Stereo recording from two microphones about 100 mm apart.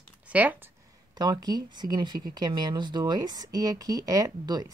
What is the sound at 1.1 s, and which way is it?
Speech, 40° right (ahead or behind).